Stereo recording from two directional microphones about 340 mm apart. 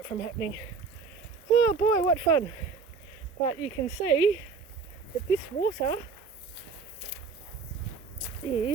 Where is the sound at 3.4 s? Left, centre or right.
Centre.